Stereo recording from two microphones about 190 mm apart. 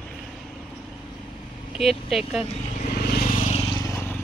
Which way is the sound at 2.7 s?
40° left (ahead or behind).